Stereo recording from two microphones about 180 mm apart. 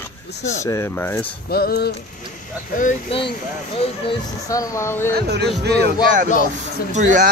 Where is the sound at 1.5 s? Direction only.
60° left (ahead or behind).